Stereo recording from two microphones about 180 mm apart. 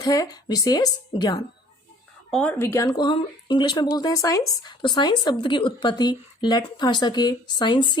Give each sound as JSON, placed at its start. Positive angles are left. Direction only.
{"t": 0.0, "sound": "speech", "side_deg": 20}
{"t": 2.3, "sound": "speech", "side_deg": 5}